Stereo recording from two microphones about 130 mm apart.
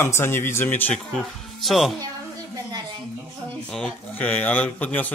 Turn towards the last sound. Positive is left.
turn(degrees=10)  # may be behind; listen again after turning